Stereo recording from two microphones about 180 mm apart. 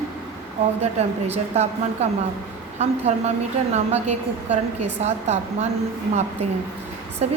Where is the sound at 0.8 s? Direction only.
35° right (ahead or behind).